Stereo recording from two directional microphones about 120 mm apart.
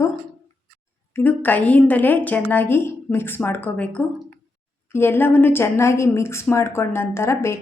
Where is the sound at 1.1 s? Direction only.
15° left (ahead or behind).